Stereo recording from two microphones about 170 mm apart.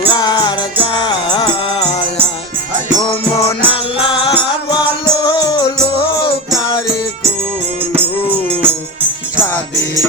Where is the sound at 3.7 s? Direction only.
30° left (ahead or behind).